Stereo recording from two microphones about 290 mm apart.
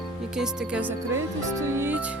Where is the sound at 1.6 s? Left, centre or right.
Centre.